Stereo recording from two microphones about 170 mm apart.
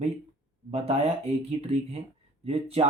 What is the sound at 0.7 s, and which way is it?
Speech, 35° right (ahead or behind).